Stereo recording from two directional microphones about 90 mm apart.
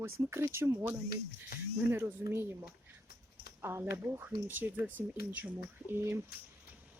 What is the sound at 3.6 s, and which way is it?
Speech, 30° right (ahead or behind).